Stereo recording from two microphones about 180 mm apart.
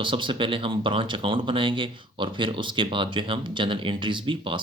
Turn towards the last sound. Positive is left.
turn(degrees=-30)  # may be behind; listen again after turning